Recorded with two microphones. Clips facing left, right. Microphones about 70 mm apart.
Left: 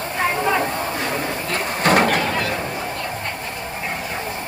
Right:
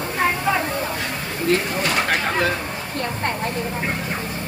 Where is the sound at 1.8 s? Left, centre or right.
Left.